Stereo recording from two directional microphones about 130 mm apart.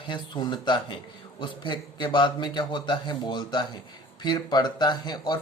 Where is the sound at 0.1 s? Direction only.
35° left (ahead or behind).